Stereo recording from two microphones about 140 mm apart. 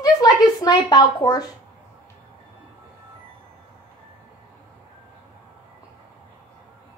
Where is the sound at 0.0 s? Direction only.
25° left (ahead or behind).